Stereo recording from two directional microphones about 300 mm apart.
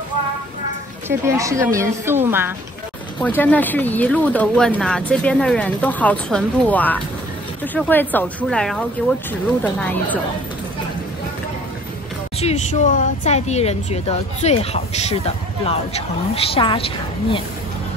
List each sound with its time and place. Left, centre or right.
1.0 s a woman's voice: centre
3.2 s speech: centre
12.4 s speech: left